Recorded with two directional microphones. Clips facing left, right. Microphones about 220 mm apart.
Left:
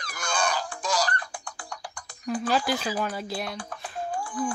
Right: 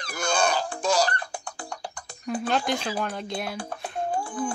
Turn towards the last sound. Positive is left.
turn(degrees=-25)  # may be behind; listen again after turning